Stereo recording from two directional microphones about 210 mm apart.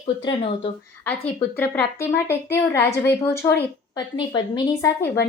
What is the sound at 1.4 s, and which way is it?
A woman's voice, 10° left (ahead or behind).